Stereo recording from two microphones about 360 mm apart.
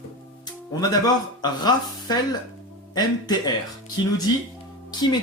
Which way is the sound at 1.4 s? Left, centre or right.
Centre.